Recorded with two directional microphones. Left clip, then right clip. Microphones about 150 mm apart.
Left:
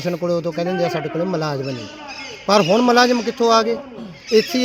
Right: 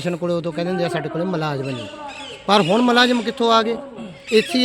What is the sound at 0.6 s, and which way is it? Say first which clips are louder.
Speech: left 2 dB; 25° right (ahead or behind).